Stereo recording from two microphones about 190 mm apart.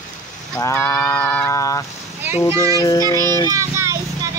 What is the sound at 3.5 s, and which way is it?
Vehicle, 15° right (ahead or behind).